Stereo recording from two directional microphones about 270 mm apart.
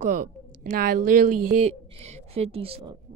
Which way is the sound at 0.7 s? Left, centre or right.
Right.